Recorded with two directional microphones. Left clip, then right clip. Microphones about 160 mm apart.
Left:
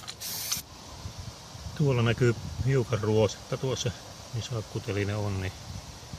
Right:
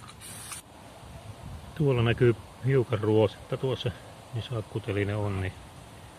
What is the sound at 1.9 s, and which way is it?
Speech, 5° right (ahead or behind).